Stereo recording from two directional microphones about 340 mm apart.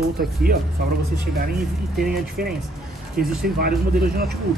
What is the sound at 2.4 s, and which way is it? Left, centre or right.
Speech, right.